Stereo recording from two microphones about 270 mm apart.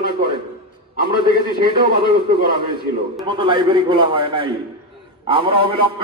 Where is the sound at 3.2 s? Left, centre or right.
Centre.